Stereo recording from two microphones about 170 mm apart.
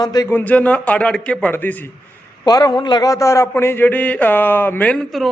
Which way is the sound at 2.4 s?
25° left (ahead or behind).